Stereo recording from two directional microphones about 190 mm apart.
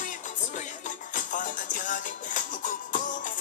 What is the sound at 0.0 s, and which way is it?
Music, 40° left (ahead or behind).